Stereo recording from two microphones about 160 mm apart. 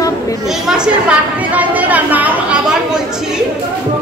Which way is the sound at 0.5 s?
5° right (ahead or behind).